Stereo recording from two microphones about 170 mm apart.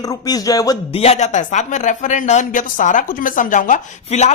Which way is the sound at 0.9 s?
40° left (ahead or behind).